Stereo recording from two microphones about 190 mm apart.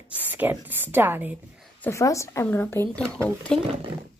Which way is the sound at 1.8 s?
15° left (ahead or behind).